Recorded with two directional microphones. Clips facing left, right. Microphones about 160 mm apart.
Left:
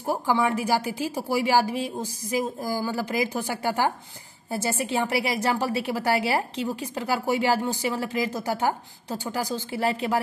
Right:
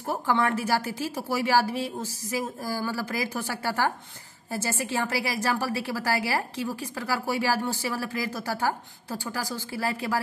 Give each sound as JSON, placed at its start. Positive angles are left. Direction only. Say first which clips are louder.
{"t": 0.0, "sound": "a woman's voice", "louder": "left 2 dB", "side_deg": 10}